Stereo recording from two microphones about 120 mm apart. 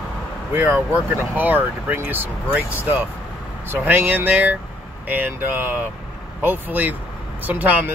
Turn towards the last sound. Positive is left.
turn(degrees=-15)  # may be behind; listen again after turning